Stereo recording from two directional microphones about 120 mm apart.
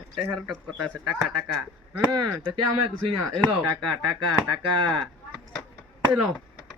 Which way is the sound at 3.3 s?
5° left (ahead or behind).